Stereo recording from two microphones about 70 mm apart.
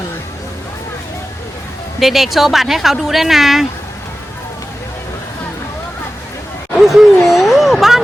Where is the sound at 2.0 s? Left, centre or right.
Centre.